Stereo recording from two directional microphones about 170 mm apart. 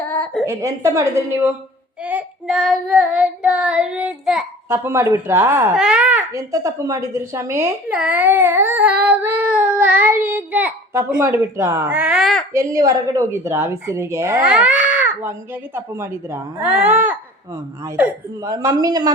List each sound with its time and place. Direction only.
0.4 s speech: 15° right (ahead or behind)
2.0 s child singing: 5° right (ahead or behind)
4.7 s speech: 15° right (ahead or behind)
5.7 s speech: 5° right (ahead or behind)
12.5 s speech: 20° right (ahead or behind)
18.4 s speech: 20° right (ahead or behind)